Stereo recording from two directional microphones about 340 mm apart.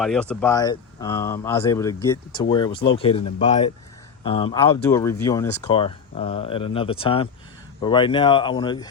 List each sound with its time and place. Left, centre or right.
0.0 s speech: centre